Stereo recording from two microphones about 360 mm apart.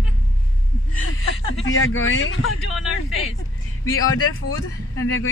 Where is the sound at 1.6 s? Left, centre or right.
Left.